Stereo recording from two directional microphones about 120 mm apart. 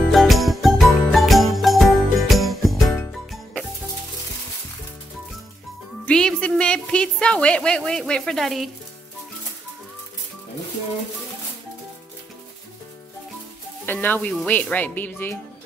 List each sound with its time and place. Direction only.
0.1 s jingle bell: centre (ahead or behind)
3.1 s music: 5° left (ahead or behind)
6.0 s a sound: 5° left (ahead or behind)
13.9 s speech: 10° left (ahead or behind)